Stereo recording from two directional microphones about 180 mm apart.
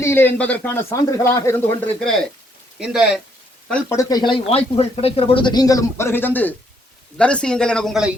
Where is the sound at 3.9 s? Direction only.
25° left (ahead or behind).